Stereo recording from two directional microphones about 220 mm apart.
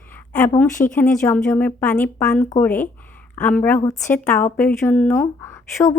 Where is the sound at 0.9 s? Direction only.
10° left (ahead or behind).